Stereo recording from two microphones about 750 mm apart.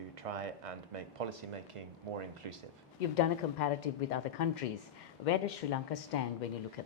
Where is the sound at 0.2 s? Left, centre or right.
Right.